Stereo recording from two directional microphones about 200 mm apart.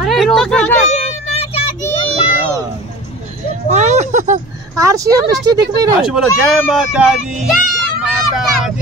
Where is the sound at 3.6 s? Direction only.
35° right (ahead or behind).